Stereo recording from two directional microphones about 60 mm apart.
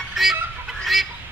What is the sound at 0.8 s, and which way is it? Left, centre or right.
Fowl, centre.